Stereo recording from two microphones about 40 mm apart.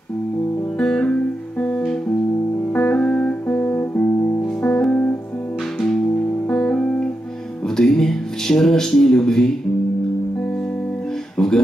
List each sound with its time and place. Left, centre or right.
0.7 s music: centre
1.0 s music: left
2.8 s music: left
3.4 s music: left
4.6 s music: centre
7.6 s music: centre
8.5 s speech: centre
11.3 s music: centre